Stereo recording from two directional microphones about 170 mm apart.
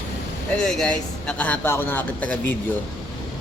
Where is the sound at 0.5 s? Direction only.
5° left (ahead or behind).